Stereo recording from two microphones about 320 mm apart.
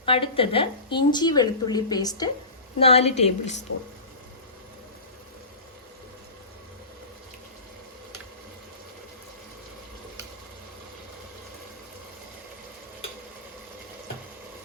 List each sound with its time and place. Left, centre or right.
0.0 s a woman's voice: centre